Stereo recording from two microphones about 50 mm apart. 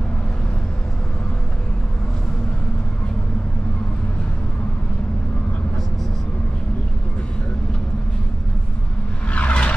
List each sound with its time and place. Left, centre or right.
9.3 s vehicle: left